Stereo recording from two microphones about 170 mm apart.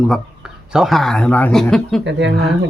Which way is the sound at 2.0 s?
90° right.